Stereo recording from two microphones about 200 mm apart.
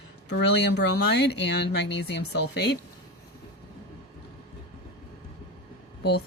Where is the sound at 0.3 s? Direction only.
60° left (ahead or behind).